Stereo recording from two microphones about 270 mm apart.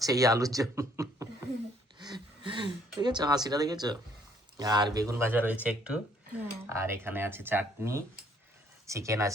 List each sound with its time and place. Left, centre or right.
0.0 s speech: centre
2.0 s a sound: centre
4.5 s speech: centre